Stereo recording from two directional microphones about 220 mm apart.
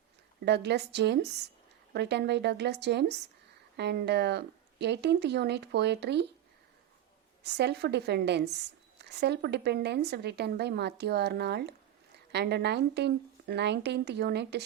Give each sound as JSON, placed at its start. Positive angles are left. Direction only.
{"t": 0.4, "sound": "speech", "side_deg": -50}
{"t": 7.4, "sound": "speech", "side_deg": -50}